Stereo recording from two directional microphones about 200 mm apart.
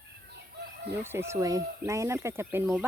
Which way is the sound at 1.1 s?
15° right (ahead or behind).